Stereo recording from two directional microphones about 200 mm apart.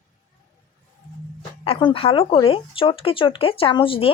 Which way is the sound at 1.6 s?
25° left (ahead or behind).